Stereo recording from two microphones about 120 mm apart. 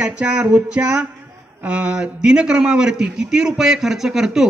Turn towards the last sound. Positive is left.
turn(degrees=-5)  # may be behind; listen again after turning